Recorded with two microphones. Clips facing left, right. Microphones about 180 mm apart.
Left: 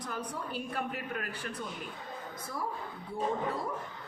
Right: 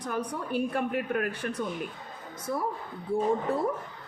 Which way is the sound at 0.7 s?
50° right (ahead or behind).